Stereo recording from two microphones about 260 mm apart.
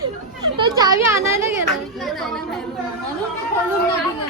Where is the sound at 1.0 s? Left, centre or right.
Centre.